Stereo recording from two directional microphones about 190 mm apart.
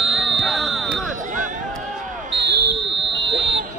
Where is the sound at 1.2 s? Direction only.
40° right (ahead or behind).